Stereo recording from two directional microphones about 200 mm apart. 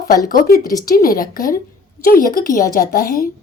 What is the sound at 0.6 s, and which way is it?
Speech, 20° left (ahead or behind).